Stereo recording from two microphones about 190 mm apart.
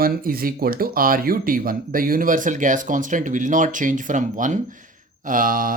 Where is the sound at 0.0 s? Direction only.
50° right (ahead or behind).